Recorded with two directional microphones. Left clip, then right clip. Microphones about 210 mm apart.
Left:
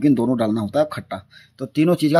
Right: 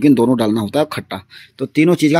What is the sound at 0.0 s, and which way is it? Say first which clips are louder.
Speech: right 5 dB; 10° right (ahead or behind).